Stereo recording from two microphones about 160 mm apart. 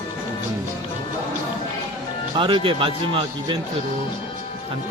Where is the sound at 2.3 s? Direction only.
30° right (ahead or behind).